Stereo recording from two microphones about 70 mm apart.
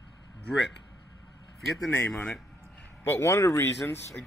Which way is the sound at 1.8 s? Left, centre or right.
Left.